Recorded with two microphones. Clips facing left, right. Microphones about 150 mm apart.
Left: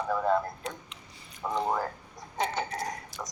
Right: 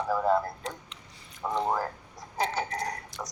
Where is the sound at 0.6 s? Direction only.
Centre (ahead or behind).